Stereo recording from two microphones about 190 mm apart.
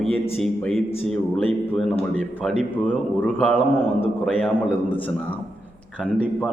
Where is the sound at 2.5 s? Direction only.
35° right (ahead or behind).